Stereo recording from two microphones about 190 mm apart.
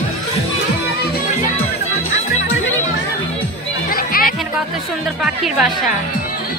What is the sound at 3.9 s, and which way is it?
Music, 50° left (ahead or behind).